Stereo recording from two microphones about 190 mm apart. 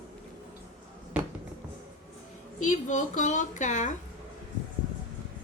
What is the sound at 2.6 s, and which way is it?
A woman's voice, 40° left (ahead or behind).